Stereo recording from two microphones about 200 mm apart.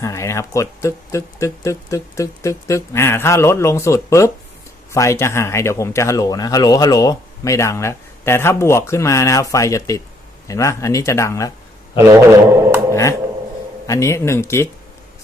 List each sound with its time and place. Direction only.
0.0 s speech: 15° left (ahead or behind)
11.9 s speech: 15° right (ahead or behind)
12.9 s a sound: 15° left (ahead or behind)
13.8 s speech: 15° left (ahead or behind)